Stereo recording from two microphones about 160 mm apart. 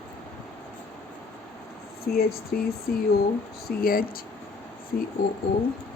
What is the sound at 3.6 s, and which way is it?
Speech, 65° left (ahead or behind).